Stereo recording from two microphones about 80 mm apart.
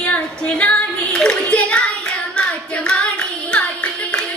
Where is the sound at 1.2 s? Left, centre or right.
Centre.